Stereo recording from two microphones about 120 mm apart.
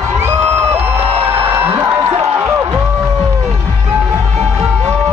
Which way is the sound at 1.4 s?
20° right (ahead or behind).